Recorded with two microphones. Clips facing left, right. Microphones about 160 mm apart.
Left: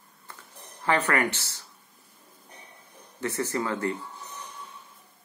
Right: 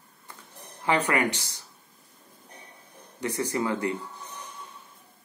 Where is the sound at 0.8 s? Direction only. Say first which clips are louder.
Even; 15° right (ahead or behind).